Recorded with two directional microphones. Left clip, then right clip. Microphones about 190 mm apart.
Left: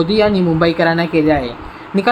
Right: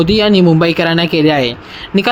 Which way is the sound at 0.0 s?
25° right (ahead or behind).